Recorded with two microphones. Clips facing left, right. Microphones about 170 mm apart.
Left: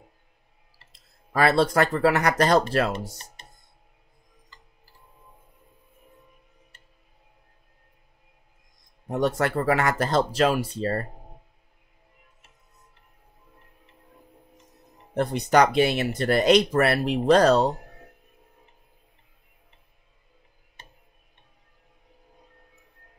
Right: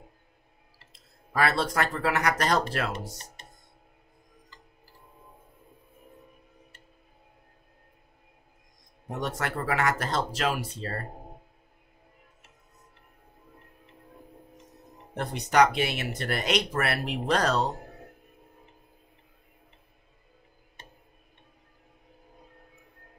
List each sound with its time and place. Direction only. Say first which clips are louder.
1.3 s speech: left 6 dB; 35° left (ahead or behind)
9.2 s speech: left 8 dB; 35° left (ahead or behind)
15.1 s speech: left 3 dB; 35° left (ahead or behind)